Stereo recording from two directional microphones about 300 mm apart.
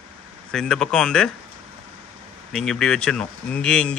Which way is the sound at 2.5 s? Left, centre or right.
Centre.